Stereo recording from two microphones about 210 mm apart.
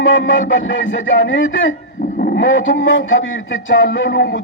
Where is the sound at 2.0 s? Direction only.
45° left (ahead or behind).